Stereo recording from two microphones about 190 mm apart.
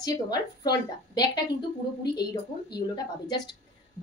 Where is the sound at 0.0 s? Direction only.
20° left (ahead or behind).